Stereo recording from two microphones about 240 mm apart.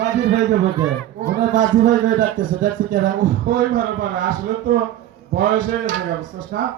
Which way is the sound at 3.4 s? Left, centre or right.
Right.